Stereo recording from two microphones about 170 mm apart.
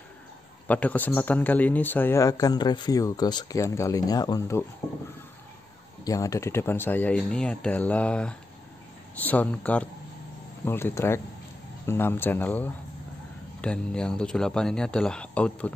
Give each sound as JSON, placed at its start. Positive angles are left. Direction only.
{"t": 0.7, "sound": "speech", "side_deg": 10}
{"t": 6.0, "sound": "speech", "side_deg": 20}